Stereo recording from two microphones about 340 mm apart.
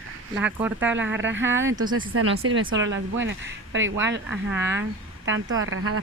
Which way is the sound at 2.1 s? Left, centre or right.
Right.